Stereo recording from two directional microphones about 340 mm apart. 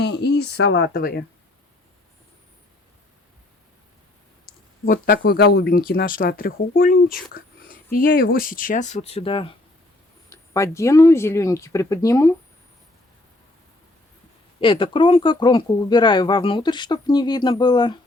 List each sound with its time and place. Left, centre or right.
0.0 s speech: left
4.4 s speech: left; by 12.3 s centre
14.6 s speech: centre